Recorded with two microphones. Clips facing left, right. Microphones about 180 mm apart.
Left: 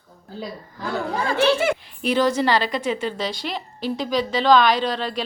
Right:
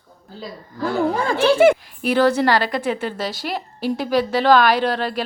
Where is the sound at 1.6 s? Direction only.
45° right (ahead or behind).